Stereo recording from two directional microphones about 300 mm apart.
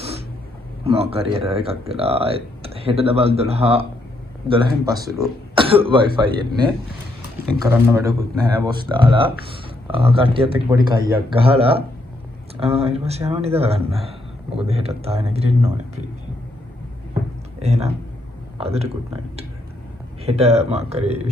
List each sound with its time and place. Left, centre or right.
0.0 s a sound: centre
1.1 s speech: centre
17.6 s speech: right
20.2 s speech: right